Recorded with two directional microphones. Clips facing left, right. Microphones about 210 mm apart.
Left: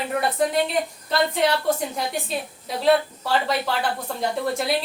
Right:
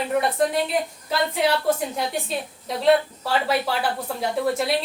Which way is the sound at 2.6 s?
Centre (ahead or behind).